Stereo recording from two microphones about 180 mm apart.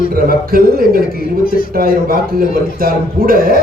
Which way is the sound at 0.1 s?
55° right (ahead or behind).